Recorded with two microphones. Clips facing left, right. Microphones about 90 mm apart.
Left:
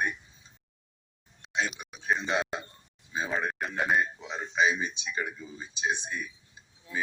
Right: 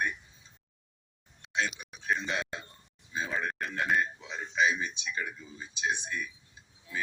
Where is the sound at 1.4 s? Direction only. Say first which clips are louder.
Left 1 dB; 20° left (ahead or behind).